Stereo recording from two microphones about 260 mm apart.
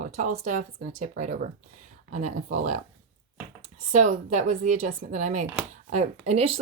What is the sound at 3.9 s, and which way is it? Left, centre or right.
Speech, right.